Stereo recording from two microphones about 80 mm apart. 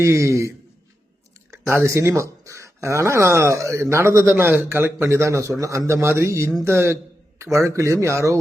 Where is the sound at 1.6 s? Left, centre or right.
Right.